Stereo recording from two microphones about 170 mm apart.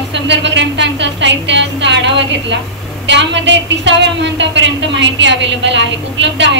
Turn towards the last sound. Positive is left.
turn(degrees=-90)